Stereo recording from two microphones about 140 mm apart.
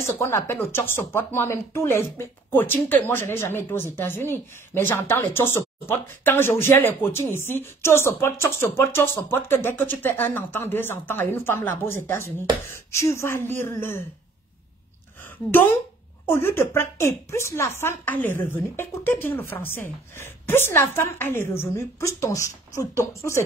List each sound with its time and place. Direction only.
0.0 s speech: 15° left (ahead or behind)
15.2 s speech: 15° left (ahead or behind)